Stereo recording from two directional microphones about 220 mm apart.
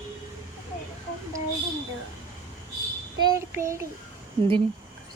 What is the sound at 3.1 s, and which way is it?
Child singing, 15° right (ahead or behind).